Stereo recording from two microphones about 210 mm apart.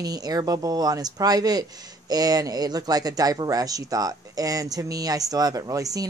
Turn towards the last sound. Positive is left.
turn(degrees=-15)  # may be behind; listen again after turning